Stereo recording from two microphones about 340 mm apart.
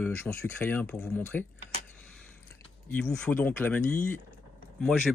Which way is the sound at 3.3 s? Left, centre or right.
Centre.